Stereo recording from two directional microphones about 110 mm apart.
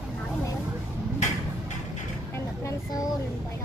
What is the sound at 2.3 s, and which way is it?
Vehicle, 30° left (ahead or behind).